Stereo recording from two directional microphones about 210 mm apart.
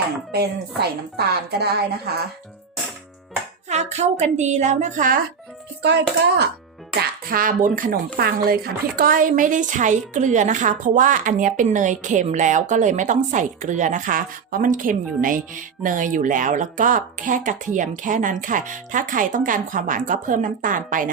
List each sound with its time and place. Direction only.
0.3 s speech: 50° right (ahead or behind)
3.7 s speech: 30° right (ahead or behind)
5.8 s speech: 55° right (ahead or behind)